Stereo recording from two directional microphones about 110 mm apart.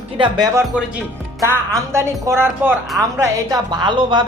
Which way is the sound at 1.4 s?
25° right (ahead or behind).